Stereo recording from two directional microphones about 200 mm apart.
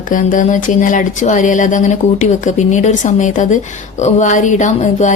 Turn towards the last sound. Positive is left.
turn(degrees=35)  # may be behind; listen again after turning